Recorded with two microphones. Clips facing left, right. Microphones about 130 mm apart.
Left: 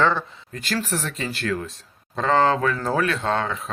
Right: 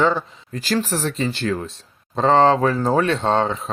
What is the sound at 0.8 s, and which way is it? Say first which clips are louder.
Speech: right 5 dB; 30° right (ahead or behind).